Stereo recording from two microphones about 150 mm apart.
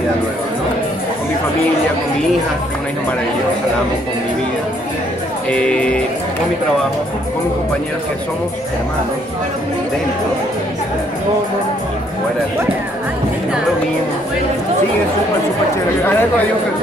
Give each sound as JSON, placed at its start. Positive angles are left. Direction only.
{"t": 5.5, "sound": "speech", "side_deg": 5}
{"t": 16.0, "sound": "speech", "side_deg": 15}